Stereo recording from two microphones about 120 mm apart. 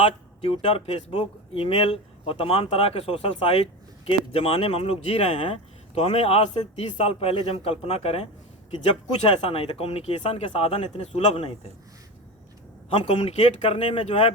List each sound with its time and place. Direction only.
0.0 s speech: 50° left (ahead or behind)
9.4 s speech: 55° left (ahead or behind)
12.9 s speech: 50° left (ahead or behind)